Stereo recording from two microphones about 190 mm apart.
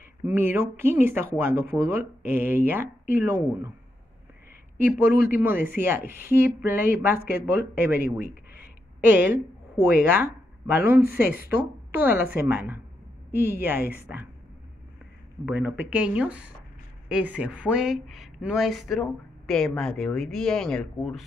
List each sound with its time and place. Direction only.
0.2 s speech: 10° right (ahead or behind)
4.7 s speech: 10° right (ahead or behind)
7.2 s speech: 55° left (ahead or behind)
7.8 s speech: 10° right (ahead or behind)
11.5 s a woman's voice: 10° right (ahead or behind)
15.4 s speech: 10° right (ahead or behind)